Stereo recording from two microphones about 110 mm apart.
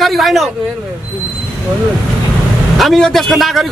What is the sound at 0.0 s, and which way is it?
Speech, centre (ahead or behind).